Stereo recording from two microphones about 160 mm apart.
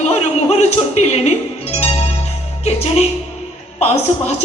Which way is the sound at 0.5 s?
40° left (ahead or behind).